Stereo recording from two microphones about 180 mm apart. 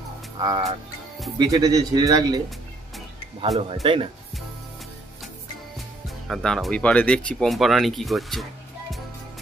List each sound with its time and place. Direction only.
0.4 s speech: 25° right (ahead or behind)
3.8 s speech: 30° right (ahead or behind)
6.2 s speech: centre (ahead or behind)